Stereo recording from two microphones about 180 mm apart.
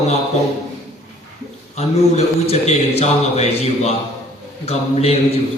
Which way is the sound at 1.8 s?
35° left (ahead or behind).